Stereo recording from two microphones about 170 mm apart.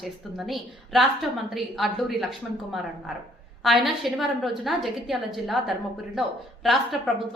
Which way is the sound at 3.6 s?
Centre (ahead or behind).